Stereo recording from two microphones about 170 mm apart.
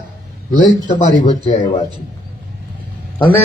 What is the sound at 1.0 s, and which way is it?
Speech, 50° left (ahead or behind).